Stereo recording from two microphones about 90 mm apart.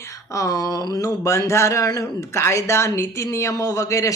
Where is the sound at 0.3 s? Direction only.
45° left (ahead or behind).